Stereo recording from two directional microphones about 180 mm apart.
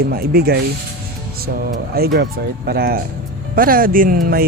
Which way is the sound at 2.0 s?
60° right (ahead or behind).